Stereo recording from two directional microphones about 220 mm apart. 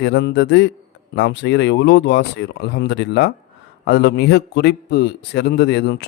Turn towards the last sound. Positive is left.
turn(degrees=50)  # may be behind; listen again after turning